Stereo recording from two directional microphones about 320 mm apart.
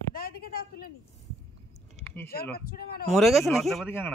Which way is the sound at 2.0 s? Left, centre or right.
Centre.